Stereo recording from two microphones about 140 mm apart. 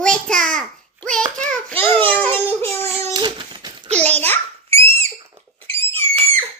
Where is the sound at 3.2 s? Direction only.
35° right (ahead or behind).